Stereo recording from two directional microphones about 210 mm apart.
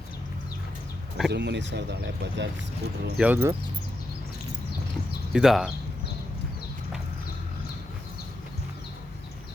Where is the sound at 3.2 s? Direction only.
5° right (ahead or behind).